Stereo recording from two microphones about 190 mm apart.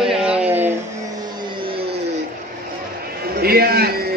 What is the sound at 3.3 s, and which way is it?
Speech, 55° right (ahead or behind).